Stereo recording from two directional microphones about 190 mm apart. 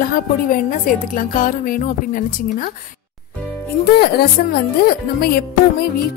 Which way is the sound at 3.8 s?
55° left (ahead or behind).